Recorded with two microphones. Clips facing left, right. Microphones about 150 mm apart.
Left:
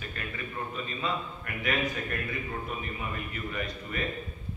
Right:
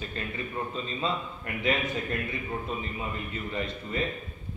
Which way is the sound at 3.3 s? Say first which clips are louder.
Right 2 dB; 25° right (ahead or behind).